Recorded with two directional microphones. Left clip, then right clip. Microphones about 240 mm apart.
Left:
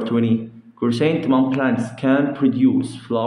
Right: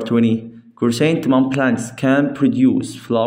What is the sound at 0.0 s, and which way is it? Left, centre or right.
Speech, right.